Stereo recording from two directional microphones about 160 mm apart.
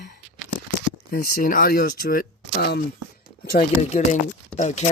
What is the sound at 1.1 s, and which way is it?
Speech, 65° left (ahead or behind).